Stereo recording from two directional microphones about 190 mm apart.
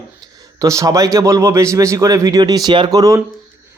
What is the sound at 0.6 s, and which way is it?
A man's voice, 15° right (ahead or behind).